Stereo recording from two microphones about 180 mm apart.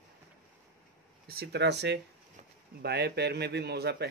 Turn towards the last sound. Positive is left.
turn(degrees=-65)  # may be behind; listen again after turning